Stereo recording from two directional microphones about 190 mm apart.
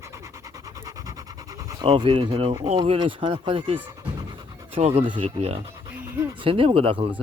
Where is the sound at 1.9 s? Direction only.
30° right (ahead or behind).